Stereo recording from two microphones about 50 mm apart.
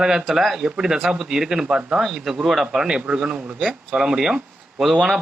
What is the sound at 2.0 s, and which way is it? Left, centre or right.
Speech, centre.